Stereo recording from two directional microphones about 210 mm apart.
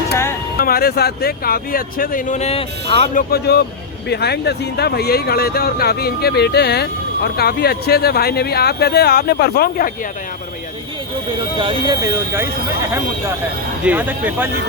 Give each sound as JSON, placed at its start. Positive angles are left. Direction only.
{"t": 0.6, "sound": "speech", "side_deg": 45}
{"t": 3.2, "sound": "speech", "side_deg": 50}
{"t": 11.5, "sound": "speech", "side_deg": -25}
{"t": 13.8, "sound": "speech", "side_deg": -10}